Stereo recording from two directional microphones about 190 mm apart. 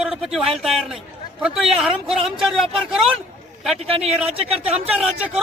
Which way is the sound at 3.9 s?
30° right (ahead or behind).